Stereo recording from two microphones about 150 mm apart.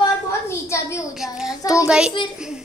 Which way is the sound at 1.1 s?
5° right (ahead or behind).